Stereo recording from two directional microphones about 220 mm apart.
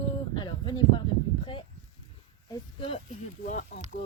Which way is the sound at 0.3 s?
20° left (ahead or behind).